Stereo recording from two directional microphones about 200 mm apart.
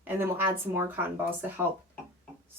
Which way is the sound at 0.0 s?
10° right (ahead or behind).